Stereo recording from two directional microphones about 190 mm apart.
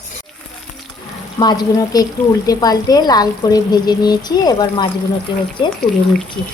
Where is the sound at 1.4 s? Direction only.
20° left (ahead or behind).